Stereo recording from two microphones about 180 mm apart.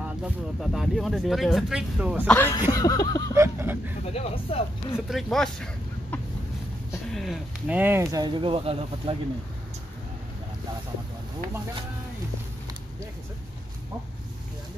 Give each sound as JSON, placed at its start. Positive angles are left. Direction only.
{"t": 0.0, "sound": "speech", "side_deg": -5}
{"t": 2.2, "sound": "speech", "side_deg": 10}
{"t": 2.7, "sound": "a sound", "side_deg": 20}
{"t": 3.3, "sound": "a sound", "side_deg": -15}
{"t": 4.1, "sound": "speech", "side_deg": 35}
{"t": 5.1, "sound": "speech", "side_deg": 0}